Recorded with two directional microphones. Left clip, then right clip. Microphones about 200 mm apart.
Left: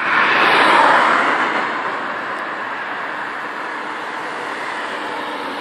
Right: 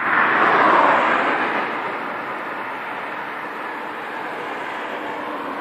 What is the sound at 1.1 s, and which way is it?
Vehicle, 25° right (ahead or behind).